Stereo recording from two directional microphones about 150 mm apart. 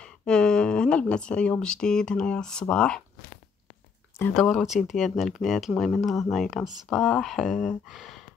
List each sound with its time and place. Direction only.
0.0 s speech: 5° left (ahead or behind)
4.3 s speech: centre (ahead or behind)